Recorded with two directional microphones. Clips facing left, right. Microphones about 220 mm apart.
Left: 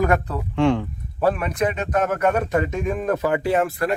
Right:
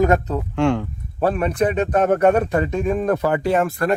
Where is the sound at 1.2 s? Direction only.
30° right (ahead or behind).